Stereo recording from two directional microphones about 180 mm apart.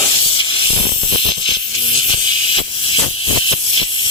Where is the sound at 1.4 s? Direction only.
30° left (ahead or behind).